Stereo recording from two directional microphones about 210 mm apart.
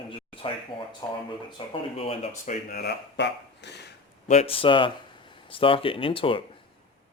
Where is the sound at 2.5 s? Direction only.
45° left (ahead or behind).